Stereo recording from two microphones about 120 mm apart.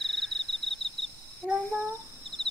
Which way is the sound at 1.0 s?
55° left (ahead or behind).